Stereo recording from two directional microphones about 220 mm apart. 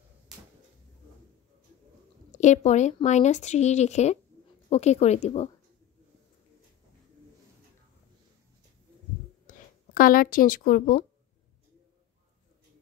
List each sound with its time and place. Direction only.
2.3 s speech: 30° left (ahead or behind)
9.5 s speech: 40° left (ahead or behind)